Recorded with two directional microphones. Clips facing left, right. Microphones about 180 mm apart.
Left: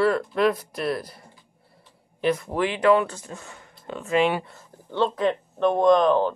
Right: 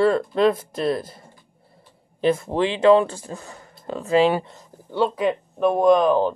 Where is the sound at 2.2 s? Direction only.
30° right (ahead or behind).